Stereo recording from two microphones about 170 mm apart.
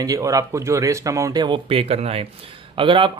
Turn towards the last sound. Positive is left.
turn(degrees=-30)  # may be behind; listen again after turning